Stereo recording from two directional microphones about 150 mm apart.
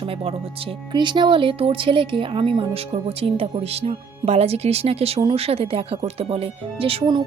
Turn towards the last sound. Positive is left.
turn(degrees=-40)  # may be behind; listen again after turning